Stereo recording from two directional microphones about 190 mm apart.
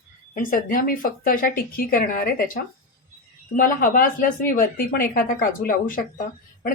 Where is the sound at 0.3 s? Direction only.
45° left (ahead or behind).